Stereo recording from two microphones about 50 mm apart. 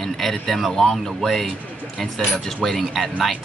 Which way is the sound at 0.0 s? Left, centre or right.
Centre.